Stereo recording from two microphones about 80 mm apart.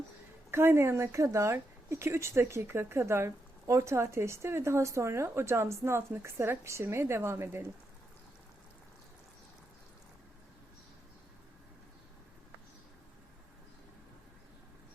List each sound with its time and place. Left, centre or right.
0.5 s speech: right